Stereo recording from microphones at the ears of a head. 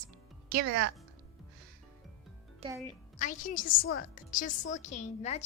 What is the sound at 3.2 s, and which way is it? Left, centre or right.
Speech, left.